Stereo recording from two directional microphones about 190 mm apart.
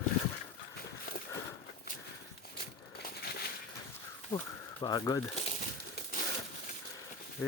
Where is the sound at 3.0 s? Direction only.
55° left (ahead or behind).